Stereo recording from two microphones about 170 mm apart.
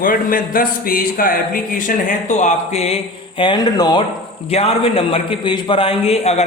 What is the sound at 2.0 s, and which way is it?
A man's voice, 45° left (ahead or behind).